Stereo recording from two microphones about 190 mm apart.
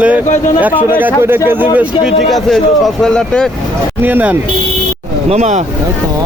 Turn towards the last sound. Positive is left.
turn(degrees=-35)  # may be behind; listen again after turning